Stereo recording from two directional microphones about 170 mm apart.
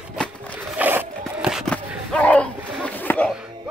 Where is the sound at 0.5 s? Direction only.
10° right (ahead or behind); by 3.3 s 10° left (ahead or behind).